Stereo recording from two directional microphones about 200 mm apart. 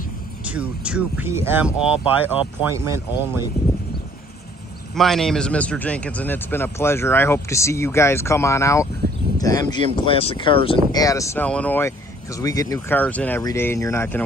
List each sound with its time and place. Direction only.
0.5 s speech: 5° right (ahead or behind)
4.9 s speech: centre (ahead or behind)